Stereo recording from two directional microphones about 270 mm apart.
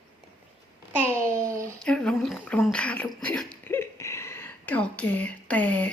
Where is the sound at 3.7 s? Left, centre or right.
Centre.